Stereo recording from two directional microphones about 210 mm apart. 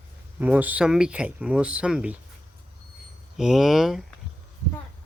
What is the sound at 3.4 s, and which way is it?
Speech, centre (ahead or behind).